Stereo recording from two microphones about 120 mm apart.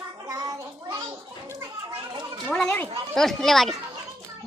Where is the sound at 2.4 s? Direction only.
5° left (ahead or behind).